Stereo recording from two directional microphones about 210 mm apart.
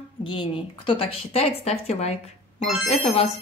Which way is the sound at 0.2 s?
25° left (ahead or behind).